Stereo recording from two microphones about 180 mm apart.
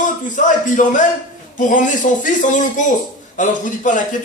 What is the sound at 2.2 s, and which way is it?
A man's voice, 45° left (ahead or behind).